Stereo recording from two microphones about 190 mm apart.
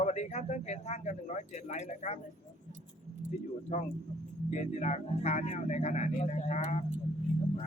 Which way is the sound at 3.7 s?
35° left (ahead or behind).